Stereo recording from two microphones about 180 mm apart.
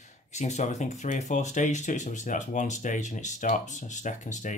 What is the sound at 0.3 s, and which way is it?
Speech, 40° left (ahead or behind).